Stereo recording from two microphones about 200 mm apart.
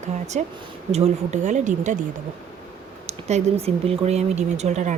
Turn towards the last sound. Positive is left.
turn(degrees=-35)  # may be behind; listen again after turning